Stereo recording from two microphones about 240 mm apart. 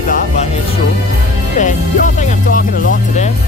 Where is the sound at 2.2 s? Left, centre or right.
Left.